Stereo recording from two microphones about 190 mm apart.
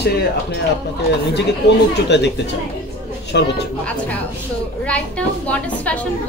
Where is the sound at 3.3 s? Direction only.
65° left (ahead or behind).